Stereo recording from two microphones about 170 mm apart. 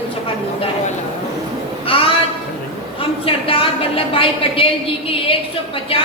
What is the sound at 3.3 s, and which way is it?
A woman's voice, 30° left (ahead or behind).